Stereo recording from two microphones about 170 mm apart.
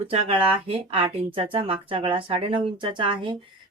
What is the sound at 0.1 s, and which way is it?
A woman's voice, 35° right (ahead or behind).